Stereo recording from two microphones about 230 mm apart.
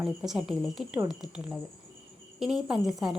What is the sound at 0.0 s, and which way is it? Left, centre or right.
Speech, centre.